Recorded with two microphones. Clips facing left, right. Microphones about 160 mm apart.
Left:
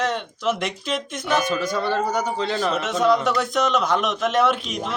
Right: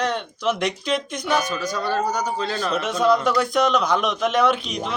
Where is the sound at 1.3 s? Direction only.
25° left (ahead or behind).